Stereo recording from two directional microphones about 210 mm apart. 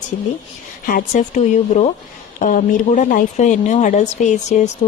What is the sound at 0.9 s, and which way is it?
Speech, 40° left (ahead or behind).